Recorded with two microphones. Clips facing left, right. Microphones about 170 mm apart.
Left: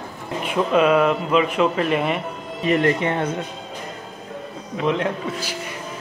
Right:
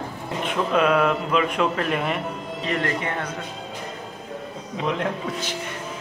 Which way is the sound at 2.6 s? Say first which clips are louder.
Left 7 dB; 20° left (ahead or behind).